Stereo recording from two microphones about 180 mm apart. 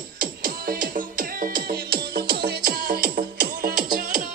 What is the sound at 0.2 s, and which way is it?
Music, 55° right (ahead or behind).